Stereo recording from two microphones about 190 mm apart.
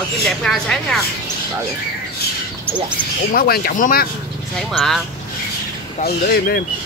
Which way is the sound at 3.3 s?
50° left (ahead or behind).